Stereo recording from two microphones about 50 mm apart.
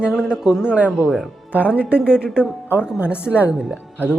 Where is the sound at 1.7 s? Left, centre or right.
Right.